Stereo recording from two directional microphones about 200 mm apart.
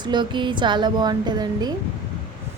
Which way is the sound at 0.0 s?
20° right (ahead or behind).